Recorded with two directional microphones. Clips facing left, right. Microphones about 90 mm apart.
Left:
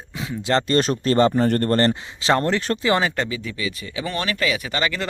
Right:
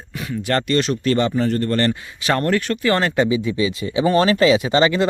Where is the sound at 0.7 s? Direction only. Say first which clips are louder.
Right 1 dB; 40° left (ahead or behind).